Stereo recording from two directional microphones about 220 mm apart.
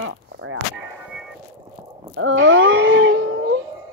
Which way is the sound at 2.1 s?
60° right (ahead or behind).